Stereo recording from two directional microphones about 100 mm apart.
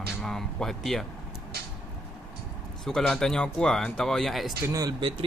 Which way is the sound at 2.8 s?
5° left (ahead or behind).